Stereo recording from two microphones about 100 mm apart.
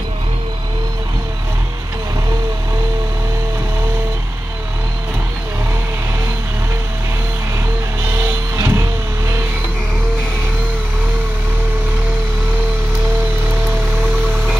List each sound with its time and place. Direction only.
8.2 s music: 30° right (ahead or behind)